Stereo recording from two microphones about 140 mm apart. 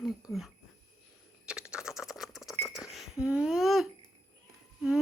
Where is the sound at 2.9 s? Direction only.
5° right (ahead or behind).